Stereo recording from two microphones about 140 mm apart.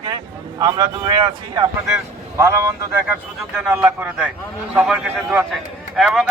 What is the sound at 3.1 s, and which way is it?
Speech, 5° right (ahead or behind).